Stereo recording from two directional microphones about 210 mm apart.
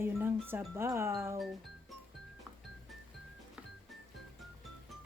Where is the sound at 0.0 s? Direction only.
10° right (ahead or behind).